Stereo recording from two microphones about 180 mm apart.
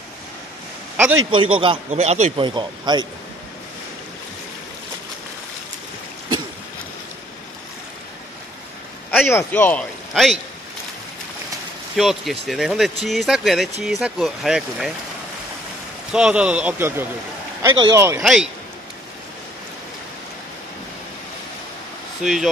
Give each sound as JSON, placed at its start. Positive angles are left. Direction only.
{"t": 1.3, "sound": "speech", "side_deg": -30}
{"t": 2.4, "sound": "speech", "side_deg": -25}
{"t": 9.1, "sound": "a man's voice", "side_deg": 10}
{"t": 12.0, "sound": "speech", "side_deg": 0}
{"t": 16.1, "sound": "speech", "side_deg": -5}
{"t": 17.6, "sound": "speech", "side_deg": -20}
{"t": 18.2, "sound": "speech", "side_deg": -5}
{"t": 22.2, "sound": "speech", "side_deg": -5}